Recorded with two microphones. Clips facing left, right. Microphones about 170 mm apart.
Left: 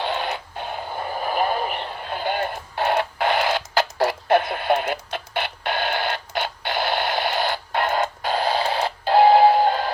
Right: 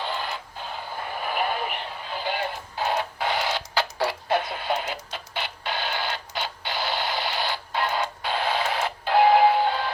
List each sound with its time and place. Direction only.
0.0 s radio: 75° left (ahead or behind)
1.2 s a sound: 40° left (ahead or behind)
2.0 s radio: 55° left (ahead or behind)